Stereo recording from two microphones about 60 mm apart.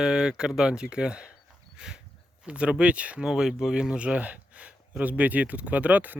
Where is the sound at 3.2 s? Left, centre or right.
Centre; by 6.1 s right.